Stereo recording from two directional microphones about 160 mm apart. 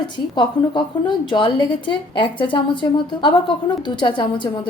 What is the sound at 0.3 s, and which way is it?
A woman's voice, 30° left (ahead or behind).